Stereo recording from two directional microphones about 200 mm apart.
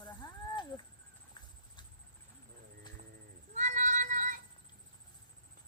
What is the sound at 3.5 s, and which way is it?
Cat, 40° right (ahead or behind).